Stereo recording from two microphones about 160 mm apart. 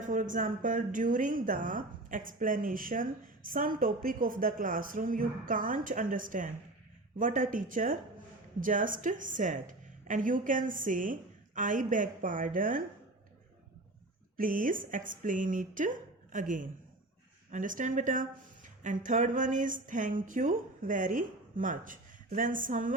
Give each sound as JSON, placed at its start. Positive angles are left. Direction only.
{"t": 0.0, "sound": "speech", "side_deg": -55}
{"t": 14.3, "sound": "speech", "side_deg": -60}